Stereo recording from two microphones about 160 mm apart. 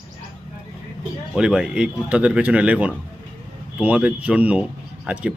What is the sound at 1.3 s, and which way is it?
Speech, 5° right (ahead or behind).